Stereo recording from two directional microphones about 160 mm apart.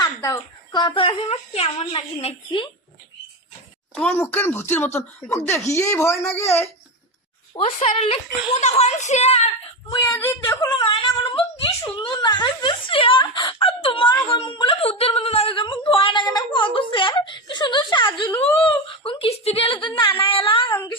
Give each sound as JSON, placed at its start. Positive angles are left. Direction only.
{"t": 0.0, "sound": "a woman's voice", "side_deg": 25}
{"t": 3.9, "sound": "speech", "side_deg": 10}
{"t": 7.9, "sound": "a woman's voice", "side_deg": 35}
{"t": 10.1, "sound": "speech", "side_deg": 15}
{"t": 10.7, "sound": "a woman's voice", "side_deg": 30}
{"t": 20.7, "sound": "speech", "side_deg": 15}